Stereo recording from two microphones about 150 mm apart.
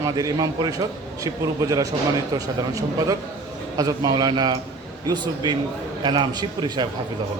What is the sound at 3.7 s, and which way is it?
A man's voice, 25° right (ahead or behind).